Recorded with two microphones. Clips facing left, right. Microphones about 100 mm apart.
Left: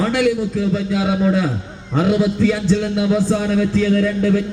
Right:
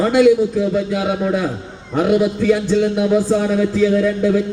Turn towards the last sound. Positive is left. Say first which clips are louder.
# right 1 dB
turn(degrees=-10)  # may be behind; listen again after turning